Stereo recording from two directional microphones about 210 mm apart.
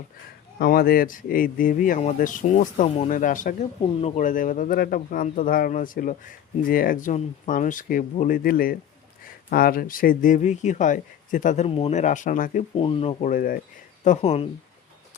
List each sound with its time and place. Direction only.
0.6 s speech: 45° left (ahead or behind)
12.8 s speech: 25° left (ahead or behind)
13.3 s speech: 40° left (ahead or behind)